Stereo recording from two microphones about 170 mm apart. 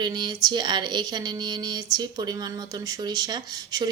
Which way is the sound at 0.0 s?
25° right (ahead or behind).